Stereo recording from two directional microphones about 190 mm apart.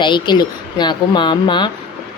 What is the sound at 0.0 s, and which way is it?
Speech, 25° left (ahead or behind).